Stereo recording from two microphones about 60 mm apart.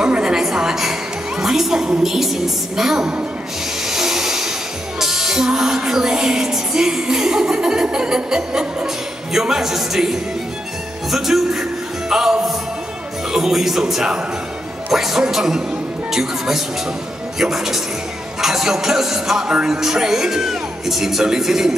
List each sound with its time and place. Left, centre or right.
0.0 s music: centre
3.8 s speech: centre
11.1 s music: centre